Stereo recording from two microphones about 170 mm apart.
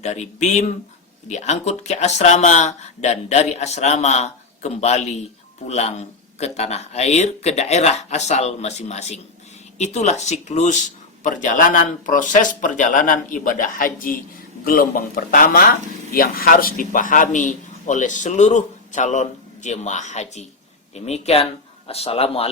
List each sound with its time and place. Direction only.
0.0 s a man's voice: 40° left (ahead or behind)